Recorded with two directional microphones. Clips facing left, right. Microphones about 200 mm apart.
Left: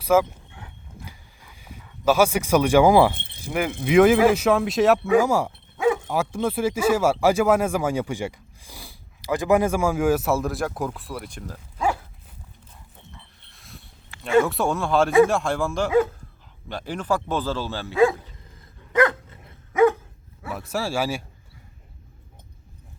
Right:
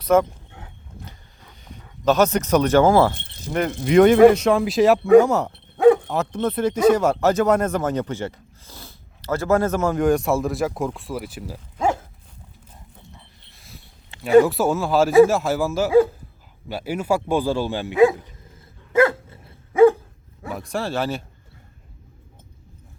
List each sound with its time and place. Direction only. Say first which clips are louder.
0.0 s speech: right 2 dB; 5° left (ahead or behind)
1.0 s a sound: even; 10° left (ahead or behind)
2.0 s speech: right 1 dB; 10° left (ahead or behind)
5.7 s dog: right 8 dB; 60° right (ahead or behind)
6.1 s speech: right 1 dB; 10° left (ahead or behind); by 11.6 s 5° right (ahead or behind)
11.8 s dog: right 3 dB; 45° right (ahead or behind)
13.5 s a sound: even; centre (ahead or behind)
14.4 s speech: right 3 dB; 5° right (ahead or behind); by 18.2 s 20° right (ahead or behind)
18.9 s dog: right 3 dB; 25° right (ahead or behind)
20.5 s speech: right 1 dB; 5° left (ahead or behind)